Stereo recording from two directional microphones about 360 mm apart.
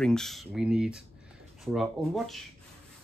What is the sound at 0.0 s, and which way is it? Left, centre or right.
Speech, centre.